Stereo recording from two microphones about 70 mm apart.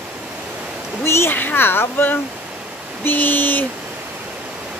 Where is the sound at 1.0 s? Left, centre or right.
Left.